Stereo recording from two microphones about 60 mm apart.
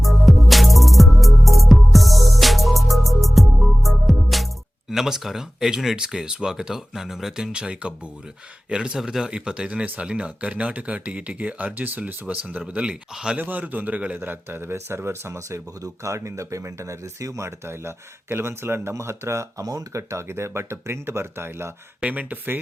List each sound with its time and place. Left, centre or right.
0.0 s music: centre
4.9 s speech: centre
9.8 s speech: right
14.2 s speech: right
19.6 s speech: right
22.0 s speech: right